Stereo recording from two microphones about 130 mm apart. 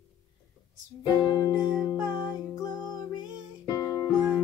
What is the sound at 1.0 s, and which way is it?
Music, 35° left (ahead or behind).